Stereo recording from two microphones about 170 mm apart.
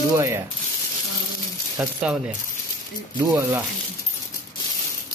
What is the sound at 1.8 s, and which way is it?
Speech, 10° right (ahead or behind).